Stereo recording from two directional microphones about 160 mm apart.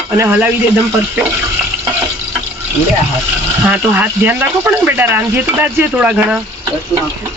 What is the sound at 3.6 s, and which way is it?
Speech, 10° right (ahead or behind).